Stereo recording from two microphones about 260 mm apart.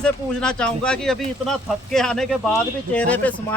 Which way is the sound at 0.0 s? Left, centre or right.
Centre.